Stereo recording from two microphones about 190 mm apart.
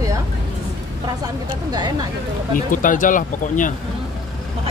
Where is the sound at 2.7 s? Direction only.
45° left (ahead or behind).